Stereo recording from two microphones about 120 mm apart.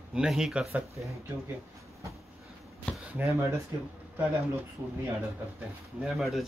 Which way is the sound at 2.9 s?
10° left (ahead or behind).